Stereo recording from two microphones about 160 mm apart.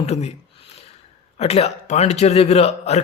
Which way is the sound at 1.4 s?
40° left (ahead or behind).